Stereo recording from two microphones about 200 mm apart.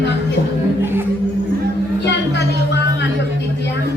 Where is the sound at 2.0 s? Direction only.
60° left (ahead or behind).